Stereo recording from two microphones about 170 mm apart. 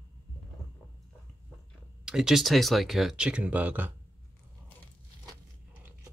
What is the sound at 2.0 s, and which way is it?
Speech, 5° right (ahead or behind).